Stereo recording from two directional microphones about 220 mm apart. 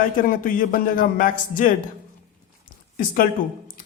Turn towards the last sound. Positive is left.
turn(degrees=40)  # may be behind; listen again after turning